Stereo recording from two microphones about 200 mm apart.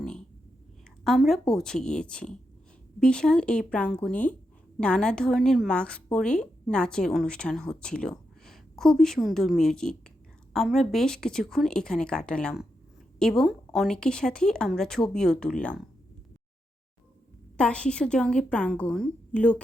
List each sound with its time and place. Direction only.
1.0 s a woman's voice: centre (ahead or behind)
17.6 s a woman's voice: 5° left (ahead or behind)